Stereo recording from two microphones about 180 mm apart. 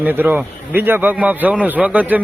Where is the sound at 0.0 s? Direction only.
10° right (ahead or behind).